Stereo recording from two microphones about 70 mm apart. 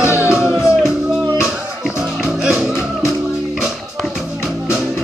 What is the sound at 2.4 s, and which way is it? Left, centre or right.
Music, centre.